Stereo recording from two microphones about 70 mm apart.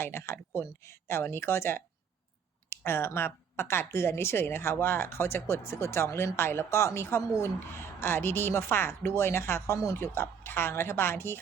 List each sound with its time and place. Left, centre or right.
0.0 s speech: left